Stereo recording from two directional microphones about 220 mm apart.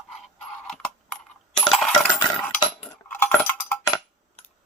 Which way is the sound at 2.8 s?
10° left (ahead or behind).